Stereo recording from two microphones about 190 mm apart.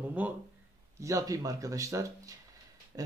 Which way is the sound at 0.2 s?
10° right (ahead or behind).